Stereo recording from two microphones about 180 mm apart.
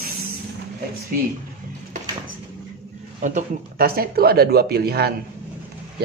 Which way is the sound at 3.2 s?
45° right (ahead or behind).